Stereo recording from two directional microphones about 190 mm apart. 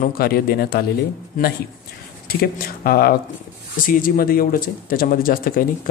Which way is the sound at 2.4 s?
50° left (ahead or behind).